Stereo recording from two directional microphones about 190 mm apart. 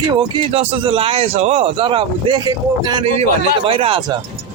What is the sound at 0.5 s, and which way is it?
A man's voice, 30° right (ahead or behind).